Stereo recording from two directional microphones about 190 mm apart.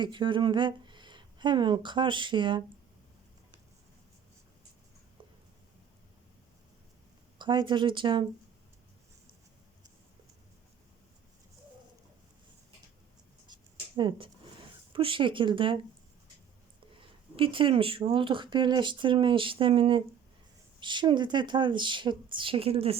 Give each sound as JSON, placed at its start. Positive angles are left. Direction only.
{"t": 0.0, "sound": "speech", "side_deg": -25}
{"t": 7.3, "sound": "speech", "side_deg": -25}
{"t": 13.5, "sound": "a sound", "side_deg": -25}
{"t": 14.9, "sound": "speech", "side_deg": -25}
{"t": 17.3, "sound": "speech", "side_deg": -25}